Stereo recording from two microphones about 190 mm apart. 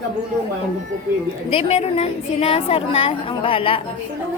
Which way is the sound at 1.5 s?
30° left (ahead or behind).